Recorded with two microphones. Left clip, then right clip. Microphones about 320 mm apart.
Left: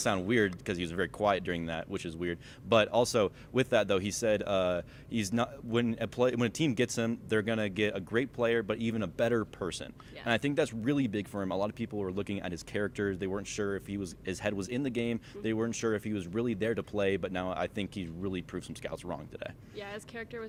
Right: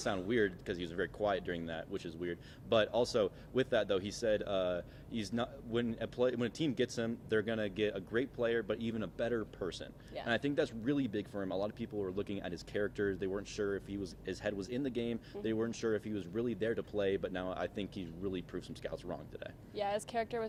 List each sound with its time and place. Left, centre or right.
0.0 s speech: left
19.7 s speech: centre